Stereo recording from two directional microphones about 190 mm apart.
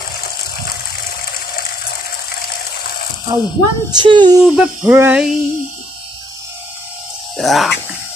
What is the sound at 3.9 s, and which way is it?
Speech, 25° right (ahead or behind).